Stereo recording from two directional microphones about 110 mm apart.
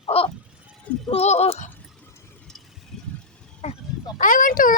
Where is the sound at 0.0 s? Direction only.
65° left (ahead or behind).